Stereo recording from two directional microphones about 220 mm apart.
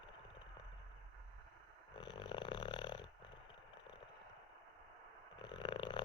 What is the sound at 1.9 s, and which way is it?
Snoring, 20° left (ahead or behind).